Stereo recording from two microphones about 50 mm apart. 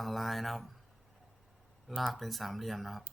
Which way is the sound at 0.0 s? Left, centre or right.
Centre.